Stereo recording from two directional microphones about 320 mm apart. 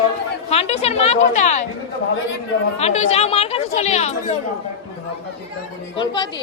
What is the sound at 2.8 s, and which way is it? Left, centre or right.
Speech, centre.